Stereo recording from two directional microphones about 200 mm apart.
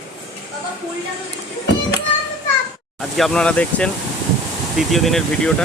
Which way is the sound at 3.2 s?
5° left (ahead or behind).